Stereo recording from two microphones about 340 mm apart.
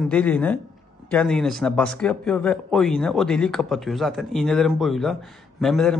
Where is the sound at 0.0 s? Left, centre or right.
Centre.